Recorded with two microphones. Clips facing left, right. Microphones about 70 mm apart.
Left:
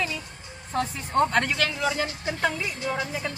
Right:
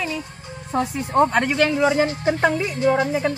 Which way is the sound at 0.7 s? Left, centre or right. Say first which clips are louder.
Right 5 dB; centre.